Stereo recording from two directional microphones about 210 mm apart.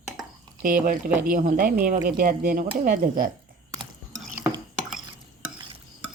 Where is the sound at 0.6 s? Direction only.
40° right (ahead or behind).